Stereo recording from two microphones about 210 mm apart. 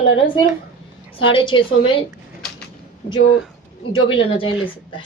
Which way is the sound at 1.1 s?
25° left (ahead or behind).